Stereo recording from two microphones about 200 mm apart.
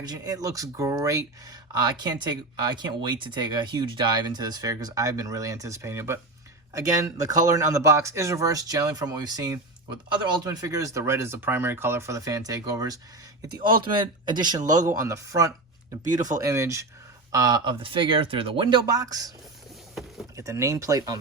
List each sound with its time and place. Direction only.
0.0 s speech: 20° right (ahead or behind)
20.3 s speech: 15° right (ahead or behind)